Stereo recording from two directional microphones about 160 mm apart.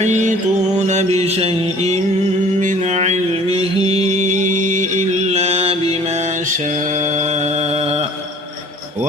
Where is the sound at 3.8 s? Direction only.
45° right (ahead or behind).